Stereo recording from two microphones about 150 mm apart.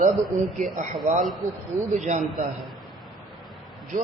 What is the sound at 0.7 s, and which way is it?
A man's voice, 60° right (ahead or behind).